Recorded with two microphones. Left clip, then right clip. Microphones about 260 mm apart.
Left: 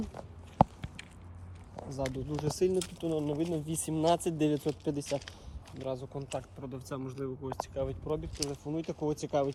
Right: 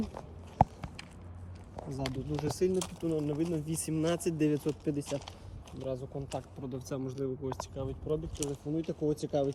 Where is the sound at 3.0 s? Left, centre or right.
Left.